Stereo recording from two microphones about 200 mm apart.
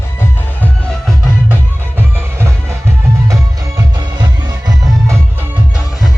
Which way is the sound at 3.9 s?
20° right (ahead or behind).